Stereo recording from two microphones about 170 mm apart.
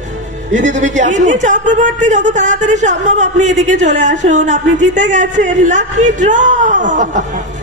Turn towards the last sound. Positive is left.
turn(degrees=-45)  # may be behind; listen again after turning